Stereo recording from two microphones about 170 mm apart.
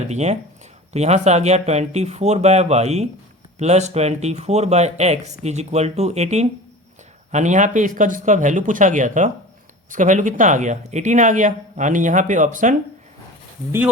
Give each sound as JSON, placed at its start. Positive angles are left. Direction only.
{"t": 0.1, "sound": "speech", "side_deg": -40}